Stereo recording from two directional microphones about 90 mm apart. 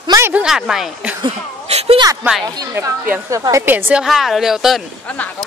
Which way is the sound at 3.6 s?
20° right (ahead or behind).